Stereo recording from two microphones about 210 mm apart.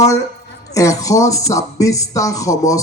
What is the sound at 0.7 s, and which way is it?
Speech, 15° left (ahead or behind).